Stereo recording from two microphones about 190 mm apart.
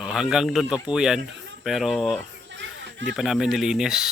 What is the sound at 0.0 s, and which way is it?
Speech, centre (ahead or behind).